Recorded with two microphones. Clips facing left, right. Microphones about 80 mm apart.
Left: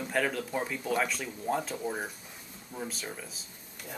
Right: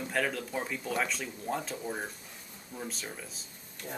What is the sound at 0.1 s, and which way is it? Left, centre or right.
Speech, centre.